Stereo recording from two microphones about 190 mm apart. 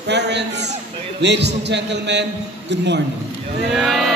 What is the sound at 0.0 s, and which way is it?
A man's voice, 65° right (ahead or behind).